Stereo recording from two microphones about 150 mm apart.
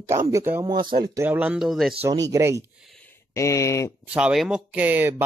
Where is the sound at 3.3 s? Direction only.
20° left (ahead or behind).